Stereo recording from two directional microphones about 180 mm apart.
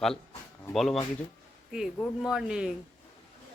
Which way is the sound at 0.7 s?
Centre (ahead or behind).